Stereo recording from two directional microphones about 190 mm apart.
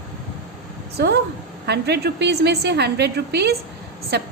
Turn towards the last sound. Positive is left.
turn(degrees=-60)  # may be behind; listen again after turning